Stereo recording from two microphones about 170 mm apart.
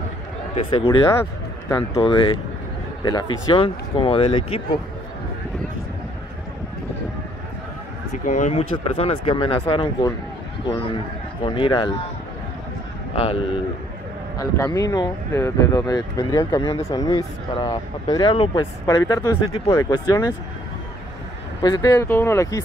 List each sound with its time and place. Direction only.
0.6 s speech: 30° left (ahead or behind)
8.3 s speech: 45° left (ahead or behind)
11.4 s speech: 30° left (ahead or behind)
13.1 s speech: 30° left (ahead or behind)
14.4 s speech: 20° left (ahead or behind)
21.5 s speech: 20° left (ahead or behind)